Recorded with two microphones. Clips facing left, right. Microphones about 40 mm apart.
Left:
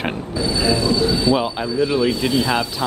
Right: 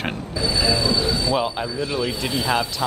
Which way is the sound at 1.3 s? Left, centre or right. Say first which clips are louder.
Left 3 dB; centre.